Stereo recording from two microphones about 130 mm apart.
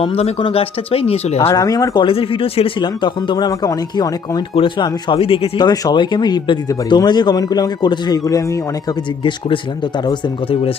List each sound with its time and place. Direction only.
0.0 s speech: 50° left (ahead or behind)
1.4 s speech: 25° left (ahead or behind)
2.0 s speech: 45° left (ahead or behind)
5.5 s speech: 30° left (ahead or behind)
9.2 s speech: 40° left (ahead or behind)